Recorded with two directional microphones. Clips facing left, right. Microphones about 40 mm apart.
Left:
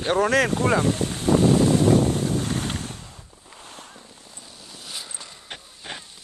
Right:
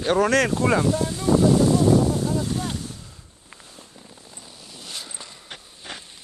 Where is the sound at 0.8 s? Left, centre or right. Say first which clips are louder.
Right 1 dB; left.